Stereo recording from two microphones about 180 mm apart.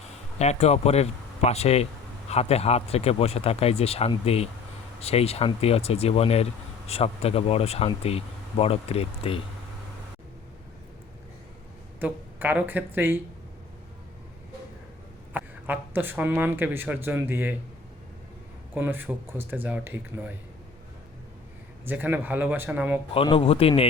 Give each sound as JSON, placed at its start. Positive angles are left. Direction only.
{"t": 0.3, "sound": "speech", "side_deg": 35}
{"t": 11.9, "sound": "speech", "side_deg": -10}
{"t": 15.3, "sound": "speech", "side_deg": -10}
{"t": 18.7, "sound": "speech", "side_deg": -10}
{"t": 21.8, "sound": "speech", "side_deg": -10}
{"t": 23.1, "sound": "speech", "side_deg": 30}